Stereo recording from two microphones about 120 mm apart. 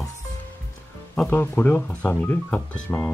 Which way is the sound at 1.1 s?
15° left (ahead or behind).